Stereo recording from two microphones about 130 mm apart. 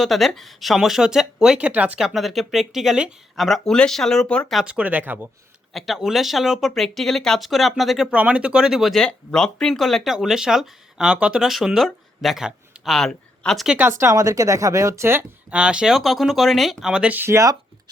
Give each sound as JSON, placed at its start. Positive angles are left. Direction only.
{"t": 0.0, "sound": "speech", "side_deg": 0}
{"t": 4.6, "sound": "speech", "side_deg": -10}
{"t": 5.7, "sound": "speech", "side_deg": 0}
{"t": 13.7, "sound": "speech", "side_deg": -10}
{"t": 14.0, "sound": "speech", "side_deg": -25}
{"t": 15.5, "sound": "speech", "side_deg": -5}